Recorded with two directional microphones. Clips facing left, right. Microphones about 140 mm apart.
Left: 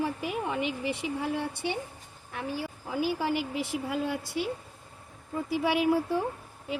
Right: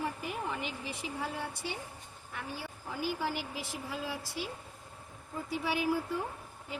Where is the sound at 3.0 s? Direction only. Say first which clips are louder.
Left 5 dB; 70° left (ahead or behind).